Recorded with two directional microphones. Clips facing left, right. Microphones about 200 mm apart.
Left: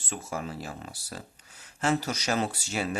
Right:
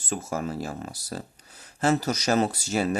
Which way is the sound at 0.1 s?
40° right (ahead or behind).